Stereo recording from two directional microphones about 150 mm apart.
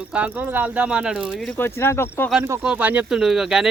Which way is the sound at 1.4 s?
15° left (ahead or behind).